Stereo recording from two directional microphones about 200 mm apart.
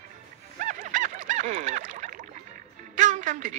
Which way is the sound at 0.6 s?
40° right (ahead or behind).